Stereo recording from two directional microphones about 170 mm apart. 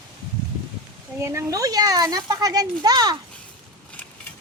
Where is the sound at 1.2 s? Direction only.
15° right (ahead or behind).